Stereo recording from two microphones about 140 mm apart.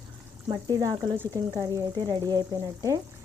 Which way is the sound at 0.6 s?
30° right (ahead or behind).